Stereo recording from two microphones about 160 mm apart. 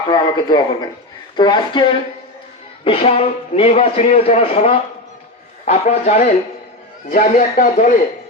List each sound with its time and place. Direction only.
0.1 s a man's voice: 25° left (ahead or behind); by 6.3 s 45° left (ahead or behind)
7.1 s a man's voice: 60° left (ahead or behind)